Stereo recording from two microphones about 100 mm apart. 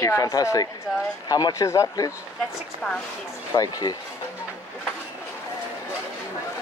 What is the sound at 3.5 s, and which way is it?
Speech, 40° left (ahead or behind).